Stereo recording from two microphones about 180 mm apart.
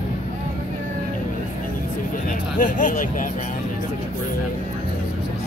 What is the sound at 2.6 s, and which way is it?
Speech, 45° left (ahead or behind).